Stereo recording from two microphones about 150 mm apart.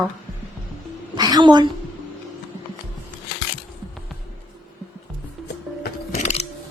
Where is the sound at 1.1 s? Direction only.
25° right (ahead or behind).